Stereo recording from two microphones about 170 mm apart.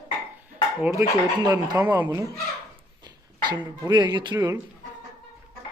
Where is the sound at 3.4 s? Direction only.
25° right (ahead or behind).